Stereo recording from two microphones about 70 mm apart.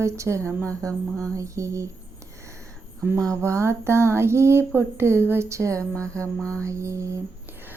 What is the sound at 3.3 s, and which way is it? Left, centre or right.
Speech, right.